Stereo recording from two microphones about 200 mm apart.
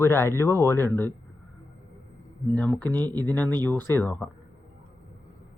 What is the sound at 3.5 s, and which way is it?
Speech, 10° left (ahead or behind).